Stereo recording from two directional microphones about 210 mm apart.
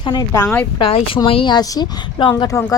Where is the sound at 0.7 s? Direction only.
25° left (ahead or behind).